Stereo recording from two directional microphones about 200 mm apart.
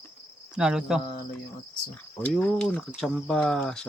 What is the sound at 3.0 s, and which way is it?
Speech, centre (ahead or behind).